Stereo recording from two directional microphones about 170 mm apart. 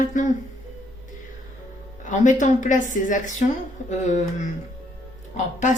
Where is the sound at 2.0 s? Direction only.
45° left (ahead or behind).